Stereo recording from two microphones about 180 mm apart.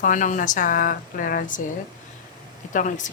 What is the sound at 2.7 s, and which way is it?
Speech, 45° left (ahead or behind).